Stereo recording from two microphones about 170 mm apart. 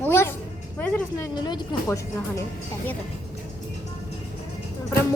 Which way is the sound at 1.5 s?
25° left (ahead or behind).